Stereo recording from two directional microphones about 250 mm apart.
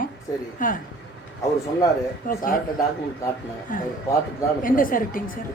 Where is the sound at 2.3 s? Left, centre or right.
Left.